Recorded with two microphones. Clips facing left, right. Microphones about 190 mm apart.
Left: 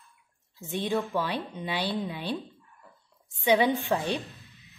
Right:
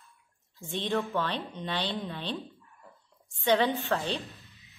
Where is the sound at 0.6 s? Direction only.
10° left (ahead or behind).